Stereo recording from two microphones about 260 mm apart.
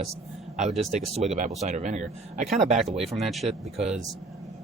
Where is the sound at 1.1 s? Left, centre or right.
Right.